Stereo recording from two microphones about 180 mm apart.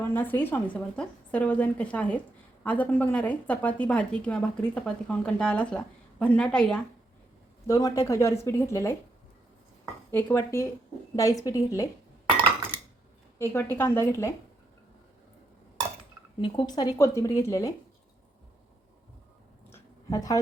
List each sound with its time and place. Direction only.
0.1 s a woman's voice: 10° left (ahead or behind)
7.7 s a woman's voice: 20° left (ahead or behind)
10.1 s a woman's voice: 10° left (ahead or behind)
13.4 s a woman's voice: 15° left (ahead or behind)
16.4 s a woman's voice: 25° left (ahead or behind)
19.7 s a sound: 20° left (ahead or behind)